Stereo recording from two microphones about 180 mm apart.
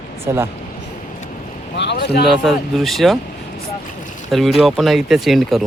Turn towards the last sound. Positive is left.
turn(degrees=0)  # may be behind; listen again after turning